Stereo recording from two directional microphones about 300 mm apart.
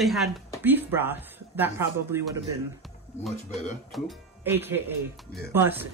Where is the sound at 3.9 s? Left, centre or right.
Centre.